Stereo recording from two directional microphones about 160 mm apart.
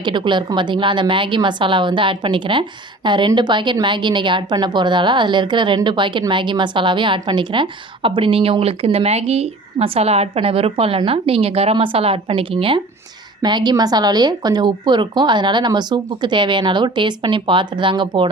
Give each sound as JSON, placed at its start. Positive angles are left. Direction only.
{"t": 0.0, "sound": "a woman's voice", "side_deg": -30}